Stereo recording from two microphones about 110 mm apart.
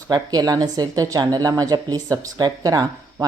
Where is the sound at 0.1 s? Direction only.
35° right (ahead or behind).